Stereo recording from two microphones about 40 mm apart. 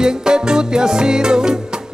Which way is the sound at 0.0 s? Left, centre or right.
Centre.